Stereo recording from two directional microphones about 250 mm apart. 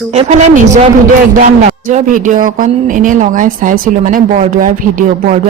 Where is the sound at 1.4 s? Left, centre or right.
Right.